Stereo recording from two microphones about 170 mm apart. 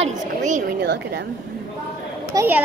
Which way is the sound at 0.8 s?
80° right.